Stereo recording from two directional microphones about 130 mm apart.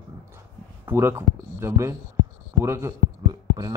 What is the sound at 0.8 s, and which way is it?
Speech, 20° right (ahead or behind).